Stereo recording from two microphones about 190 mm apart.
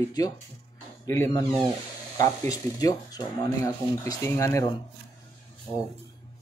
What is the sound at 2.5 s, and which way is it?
Speech, 20° left (ahead or behind).